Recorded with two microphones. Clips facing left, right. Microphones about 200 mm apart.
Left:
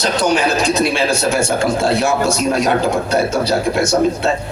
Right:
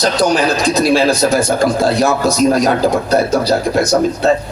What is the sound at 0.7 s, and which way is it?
Speech, 35° right (ahead or behind).